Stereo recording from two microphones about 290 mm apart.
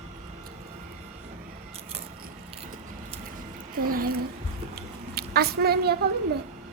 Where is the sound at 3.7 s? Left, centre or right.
Right.